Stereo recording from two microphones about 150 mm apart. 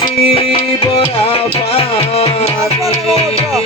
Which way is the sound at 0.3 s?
40° left (ahead or behind).